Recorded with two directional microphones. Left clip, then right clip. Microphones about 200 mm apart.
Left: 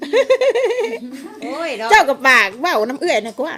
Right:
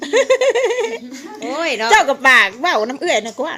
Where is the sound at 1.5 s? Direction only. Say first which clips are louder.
Right 4 dB; 50° right (ahead or behind).